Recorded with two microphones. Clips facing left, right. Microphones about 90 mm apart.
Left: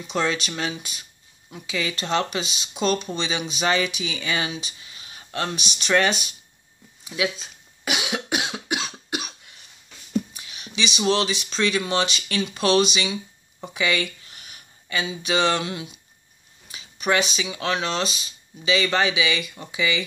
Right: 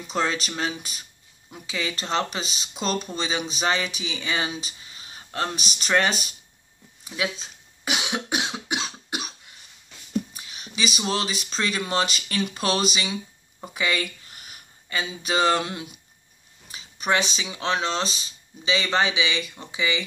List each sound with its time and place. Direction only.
0.0 s speech: 35° right (ahead or behind)
1.5 s speech: 35° right (ahead or behind)
10.3 s a sound: 40° right (ahead or behind)
11.1 s speech: 40° right (ahead or behind)
14.5 s a sound: 40° right (ahead or behind)
15.2 s speech: 40° right (ahead or behind)
16.6 s speech: 35° right (ahead or behind)